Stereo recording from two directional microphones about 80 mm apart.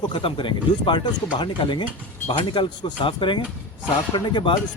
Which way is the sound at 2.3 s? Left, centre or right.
Left.